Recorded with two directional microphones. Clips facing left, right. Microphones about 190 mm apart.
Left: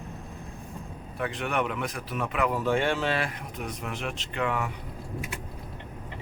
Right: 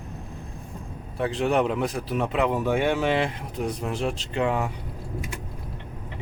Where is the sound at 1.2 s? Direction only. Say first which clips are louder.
Right 6 dB; 30° right (ahead or behind).